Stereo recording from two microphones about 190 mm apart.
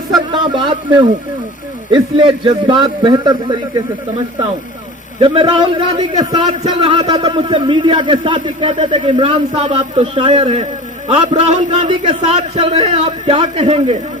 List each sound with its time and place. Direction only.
0.3 s a man's voice: 25° right (ahead or behind)
1.9 s a man's voice: 25° right (ahead or behind)
5.2 s a man's voice: 25° right (ahead or behind)